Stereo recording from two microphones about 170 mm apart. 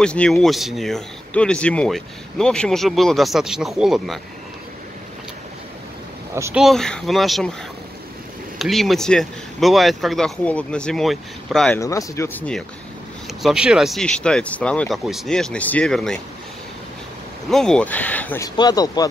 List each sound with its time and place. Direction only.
0.0 s speech: 5° left (ahead or behind)
6.5 s speech: centre (ahead or behind)
8.5 s speech: centre (ahead or behind)
11.8 s speech: 20° left (ahead or behind)
13.4 s speech: 5° right (ahead or behind)
17.5 s speech: 5° left (ahead or behind)
18.6 s speech: 20° left (ahead or behind)